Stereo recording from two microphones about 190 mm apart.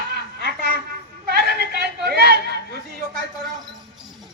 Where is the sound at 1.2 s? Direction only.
55° right (ahead or behind).